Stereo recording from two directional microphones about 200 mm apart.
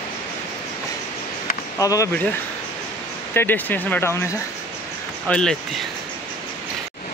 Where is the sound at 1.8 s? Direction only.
15° left (ahead or behind).